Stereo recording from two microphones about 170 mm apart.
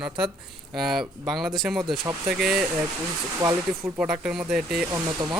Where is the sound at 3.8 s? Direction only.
5° right (ahead or behind).